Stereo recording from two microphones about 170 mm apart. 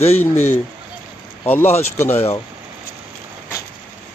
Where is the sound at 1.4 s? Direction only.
10° left (ahead or behind).